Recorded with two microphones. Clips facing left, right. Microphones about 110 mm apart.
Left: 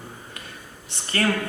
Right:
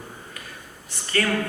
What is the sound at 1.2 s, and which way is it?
Speech, 45° left (ahead or behind).